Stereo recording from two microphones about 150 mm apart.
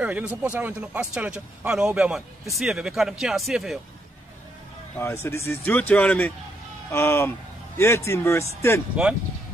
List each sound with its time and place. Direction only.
0.0 s speech: 10° right (ahead or behind)
4.9 s a man's voice: 15° left (ahead or behind)